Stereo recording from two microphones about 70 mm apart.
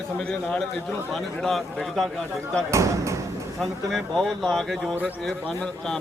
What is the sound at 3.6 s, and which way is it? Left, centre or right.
A man's voice, centre.